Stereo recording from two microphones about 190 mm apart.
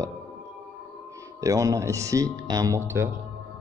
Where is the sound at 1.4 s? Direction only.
15° right (ahead or behind).